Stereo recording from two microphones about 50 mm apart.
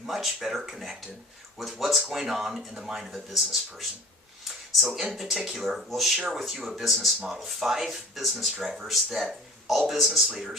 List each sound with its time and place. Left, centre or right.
0.0 s speech: centre
5.2 s speech: centre